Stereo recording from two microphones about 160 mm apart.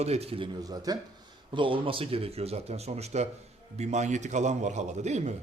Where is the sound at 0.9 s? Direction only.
25° right (ahead or behind); by 5.3 s 45° right (ahead or behind).